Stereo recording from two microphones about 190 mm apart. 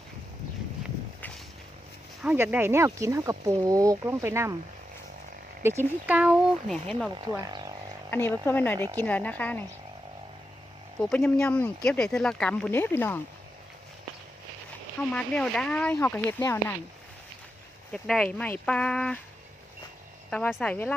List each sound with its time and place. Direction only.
2.2 s speech: 10° right (ahead or behind)
6.1 s speech: 5° right (ahead or behind)
7.1 s speech: 25° right (ahead or behind)
8.1 s speech: 10° left (ahead or behind)
11.0 s speech: 5° left (ahead or behind)
15.1 s speech: 5° left (ahead or behind)
17.9 s speech: 5° left (ahead or behind)
20.3 s speech: 5° left (ahead or behind)